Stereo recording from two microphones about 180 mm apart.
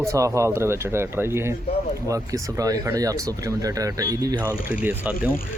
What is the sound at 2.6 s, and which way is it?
A man's voice, 20° right (ahead or behind).